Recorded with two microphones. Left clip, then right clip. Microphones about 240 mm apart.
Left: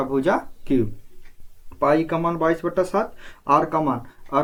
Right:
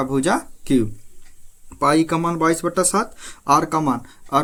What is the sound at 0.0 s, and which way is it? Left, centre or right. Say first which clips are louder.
Speech: right 1 dB; right.